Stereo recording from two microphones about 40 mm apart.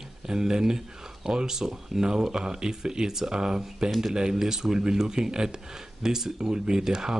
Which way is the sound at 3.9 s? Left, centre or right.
Centre.